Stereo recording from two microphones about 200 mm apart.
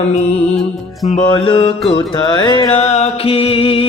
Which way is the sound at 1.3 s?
25° left (ahead or behind).